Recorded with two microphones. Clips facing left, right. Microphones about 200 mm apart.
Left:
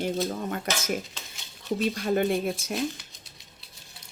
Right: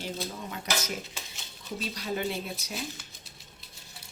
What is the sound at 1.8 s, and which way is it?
Speech, 50° left (ahead or behind).